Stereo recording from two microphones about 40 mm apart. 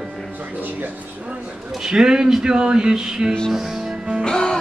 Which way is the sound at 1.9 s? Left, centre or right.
Centre.